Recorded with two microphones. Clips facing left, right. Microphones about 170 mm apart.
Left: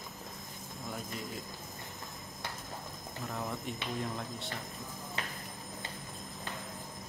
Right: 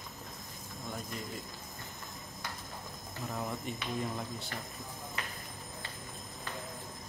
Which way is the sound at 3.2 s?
5° right (ahead or behind).